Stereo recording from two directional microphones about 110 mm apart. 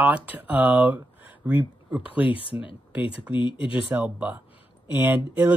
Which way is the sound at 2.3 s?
50° left (ahead or behind).